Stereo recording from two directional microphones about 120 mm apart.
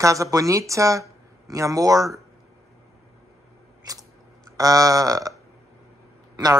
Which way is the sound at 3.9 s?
30° right (ahead or behind).